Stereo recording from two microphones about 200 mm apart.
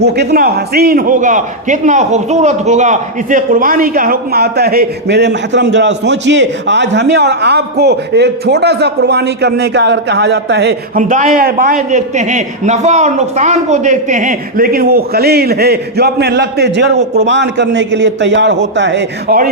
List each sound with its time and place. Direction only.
0.0 s a man's voice: 55° right (ahead or behind)
11.1 s a man's voice: 40° right (ahead or behind); by 19.4 s 60° right (ahead or behind)